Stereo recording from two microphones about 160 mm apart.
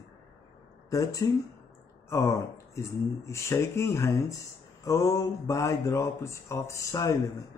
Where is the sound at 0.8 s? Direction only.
20° left (ahead or behind).